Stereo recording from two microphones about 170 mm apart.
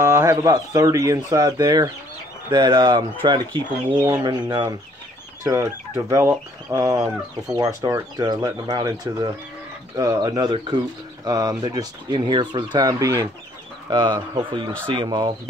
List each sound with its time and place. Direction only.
0.0 s speech: 15° right (ahead or behind)